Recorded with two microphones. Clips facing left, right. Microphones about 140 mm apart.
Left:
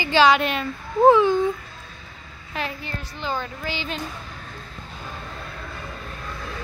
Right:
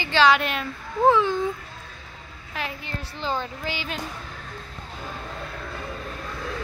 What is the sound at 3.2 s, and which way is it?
Speech, 25° right (ahead or behind).